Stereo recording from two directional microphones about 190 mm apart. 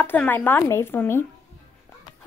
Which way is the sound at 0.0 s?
10° left (ahead or behind).